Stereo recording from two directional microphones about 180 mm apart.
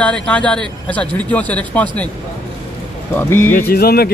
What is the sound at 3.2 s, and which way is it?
Speech, 10° left (ahead or behind).